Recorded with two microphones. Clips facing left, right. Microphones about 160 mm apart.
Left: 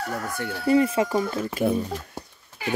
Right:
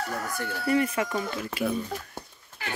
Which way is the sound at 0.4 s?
25° left (ahead or behind).